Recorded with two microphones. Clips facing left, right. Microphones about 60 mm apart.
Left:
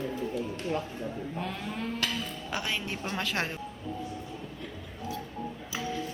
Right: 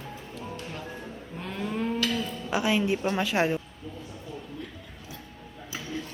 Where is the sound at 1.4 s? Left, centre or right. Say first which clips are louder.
Right 7 dB; centre.